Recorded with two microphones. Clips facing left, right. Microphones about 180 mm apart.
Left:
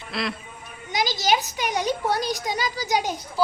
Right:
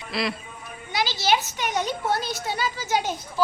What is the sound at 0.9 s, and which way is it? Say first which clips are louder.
A woman's voice: left 1 dB; 15° left (ahead or behind).